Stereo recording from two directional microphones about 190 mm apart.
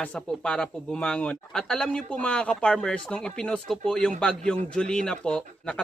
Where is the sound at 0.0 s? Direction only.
5° left (ahead or behind).